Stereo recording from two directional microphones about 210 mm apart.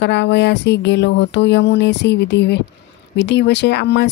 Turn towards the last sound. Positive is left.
turn(degrees=55)  # may be behind; listen again after turning